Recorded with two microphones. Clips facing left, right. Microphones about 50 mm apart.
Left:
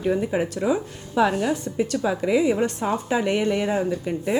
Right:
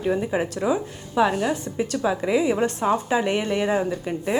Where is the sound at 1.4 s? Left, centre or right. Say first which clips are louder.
Left 1 dB; right.